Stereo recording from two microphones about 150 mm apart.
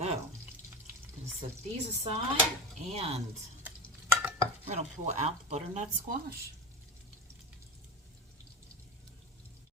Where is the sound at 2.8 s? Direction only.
45° right (ahead or behind).